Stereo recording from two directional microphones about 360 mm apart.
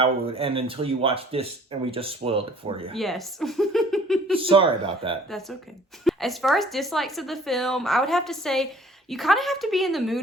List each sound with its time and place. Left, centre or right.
0.0 s speech: centre
2.9 s speech: centre
4.4 s speech: centre
5.3 s speech: centre